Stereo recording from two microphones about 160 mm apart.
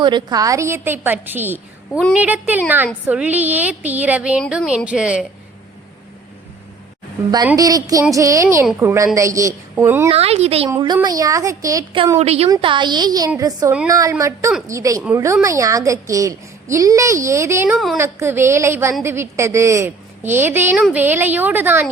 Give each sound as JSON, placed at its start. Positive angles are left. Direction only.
{"t": 0.0, "sound": "a woman's voice", "side_deg": -25}
{"t": 7.5, "sound": "a woman's voice", "side_deg": -20}
{"t": 10.1, "sound": "a woman's voice", "side_deg": -40}
{"t": 10.7, "sound": "a woman's voice", "side_deg": -25}
{"t": 12.2, "sound": "a woman's voice", "side_deg": -40}
{"t": 12.5, "sound": "a woman's voice", "side_deg": -30}
{"t": 20.7, "sound": "a woman's voice", "side_deg": 0}
{"t": 21.0, "sound": "a woman's voice", "side_deg": -15}